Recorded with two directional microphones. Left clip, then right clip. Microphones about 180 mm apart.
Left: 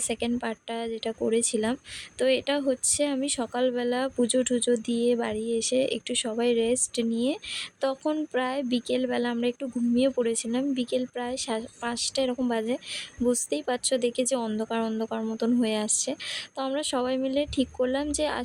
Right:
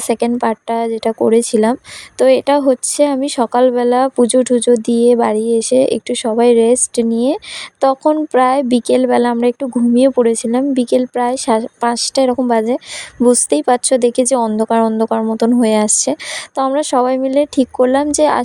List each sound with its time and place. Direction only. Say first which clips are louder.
0.1 s speech: right 17 dB; 40° right (ahead or behind)